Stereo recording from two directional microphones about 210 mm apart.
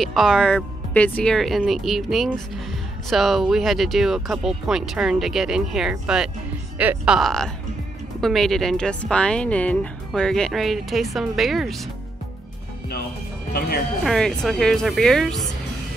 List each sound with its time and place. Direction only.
0.0 s speech: centre (ahead or behind)
13.5 s speech: 45° left (ahead or behind)
14.0 s speech: centre (ahead or behind)